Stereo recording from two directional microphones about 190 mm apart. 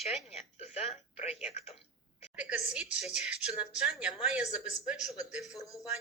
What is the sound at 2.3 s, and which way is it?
A woman's voice, 5° right (ahead or behind).